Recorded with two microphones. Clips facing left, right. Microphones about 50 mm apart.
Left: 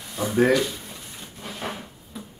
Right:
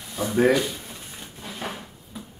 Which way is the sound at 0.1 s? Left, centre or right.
Centre.